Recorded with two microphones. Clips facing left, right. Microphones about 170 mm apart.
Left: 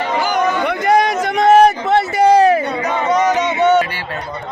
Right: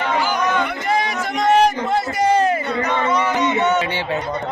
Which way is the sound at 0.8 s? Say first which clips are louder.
Left 7 dB; 65° left (ahead or behind).